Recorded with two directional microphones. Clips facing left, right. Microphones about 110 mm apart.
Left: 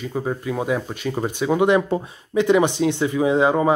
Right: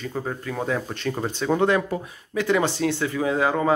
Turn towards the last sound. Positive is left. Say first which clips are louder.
# left 5 dB
turn(degrees=20)  # may be behind; listen again after turning